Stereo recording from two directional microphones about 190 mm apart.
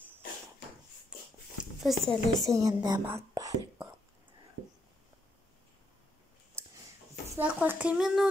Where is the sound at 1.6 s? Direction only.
Centre (ahead or behind).